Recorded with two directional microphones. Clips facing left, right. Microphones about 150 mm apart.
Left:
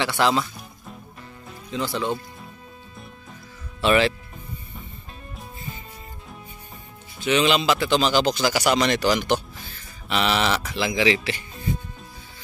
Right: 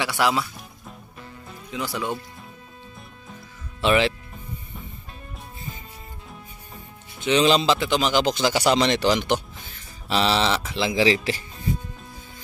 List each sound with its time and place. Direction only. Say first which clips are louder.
0.2 s music: left 1 dB; 5° right (ahead or behind)
1.7 s speech: left 2 dB; 10° right (ahead or behind)
3.8 s speech: left 1 dB; 20° right (ahead or behind)
7.2 s speech: right 1 dB; 30° right (ahead or behind)
7.9 s speech: left 1 dB; 15° right (ahead or behind); by 11.4 s 35° right (ahead or behind)